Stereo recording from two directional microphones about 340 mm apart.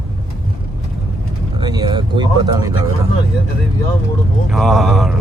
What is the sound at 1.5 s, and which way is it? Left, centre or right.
Speech, centre.